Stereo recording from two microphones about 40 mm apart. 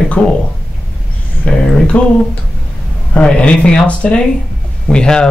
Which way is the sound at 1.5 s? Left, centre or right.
Left.